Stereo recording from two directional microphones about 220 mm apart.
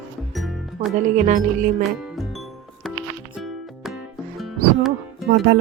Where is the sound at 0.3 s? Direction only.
Centre (ahead or behind).